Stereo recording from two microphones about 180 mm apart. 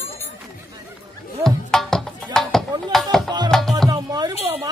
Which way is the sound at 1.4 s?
5° left (ahead or behind).